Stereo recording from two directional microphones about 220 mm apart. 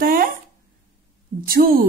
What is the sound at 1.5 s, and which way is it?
Speech, 40° right (ahead or behind).